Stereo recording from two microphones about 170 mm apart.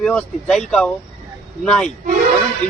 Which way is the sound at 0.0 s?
5° left (ahead or behind).